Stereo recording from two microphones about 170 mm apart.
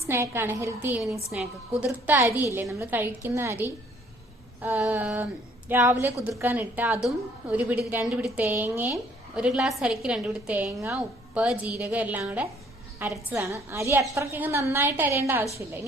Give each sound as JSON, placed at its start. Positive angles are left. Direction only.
{"t": 0.1, "sound": "a woman's voice", "side_deg": -15}
{"t": 2.5, "sound": "a woman's voice", "side_deg": -15}